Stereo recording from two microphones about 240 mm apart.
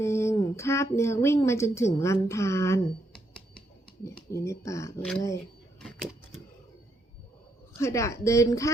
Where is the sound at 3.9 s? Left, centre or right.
Centre.